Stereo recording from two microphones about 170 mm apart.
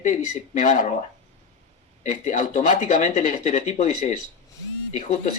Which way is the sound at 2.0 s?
45° left (ahead or behind).